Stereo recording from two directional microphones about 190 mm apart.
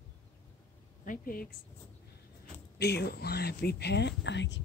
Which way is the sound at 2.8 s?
60° left (ahead or behind).